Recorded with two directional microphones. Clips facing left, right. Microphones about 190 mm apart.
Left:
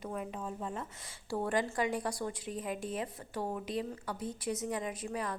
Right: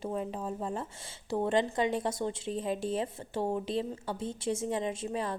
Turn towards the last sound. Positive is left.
turn(degrees=-25)  # may be behind; listen again after turning